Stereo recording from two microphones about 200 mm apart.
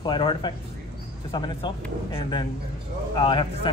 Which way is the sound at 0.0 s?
25° left (ahead or behind).